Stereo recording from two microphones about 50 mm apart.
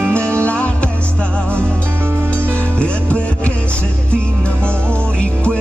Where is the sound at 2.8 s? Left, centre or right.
Left.